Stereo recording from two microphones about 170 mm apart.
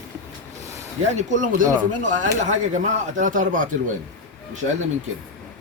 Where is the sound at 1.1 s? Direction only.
45° right (ahead or behind).